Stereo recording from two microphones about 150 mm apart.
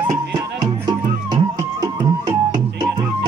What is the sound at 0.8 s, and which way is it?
Music, 25° right (ahead or behind).